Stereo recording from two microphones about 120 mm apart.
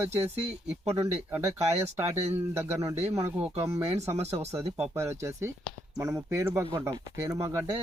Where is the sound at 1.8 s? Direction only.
60° right (ahead or behind).